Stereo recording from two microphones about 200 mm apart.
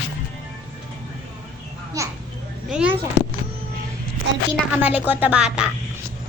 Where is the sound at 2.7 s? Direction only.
5° right (ahead or behind).